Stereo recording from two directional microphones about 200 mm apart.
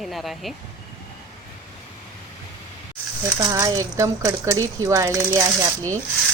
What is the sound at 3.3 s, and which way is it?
Speech, 15° right (ahead or behind).